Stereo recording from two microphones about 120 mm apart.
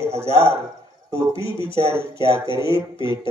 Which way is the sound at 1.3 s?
45° left (ahead or behind).